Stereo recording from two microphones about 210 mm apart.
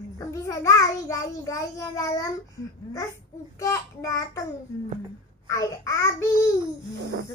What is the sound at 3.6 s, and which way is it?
Speech, 15° left (ahead or behind).